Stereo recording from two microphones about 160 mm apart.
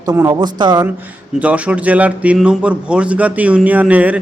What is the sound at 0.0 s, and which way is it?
Speech, 20° right (ahead or behind).